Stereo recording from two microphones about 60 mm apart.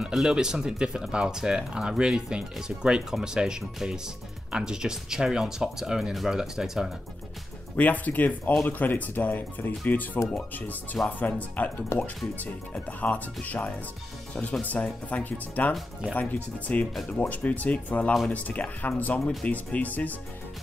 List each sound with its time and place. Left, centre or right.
0.1 s speech: centre
7.7 s speech: left
11.9 s speech: left
12.4 s speech: left